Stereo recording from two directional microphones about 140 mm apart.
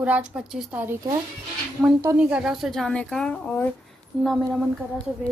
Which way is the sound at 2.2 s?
5° right (ahead or behind).